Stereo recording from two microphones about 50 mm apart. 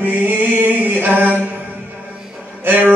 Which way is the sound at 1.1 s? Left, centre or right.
Right.